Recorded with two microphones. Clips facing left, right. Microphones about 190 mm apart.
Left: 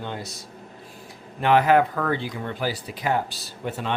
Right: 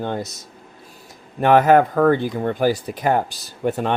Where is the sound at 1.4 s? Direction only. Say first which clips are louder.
Right 5 dB; 45° right (ahead or behind).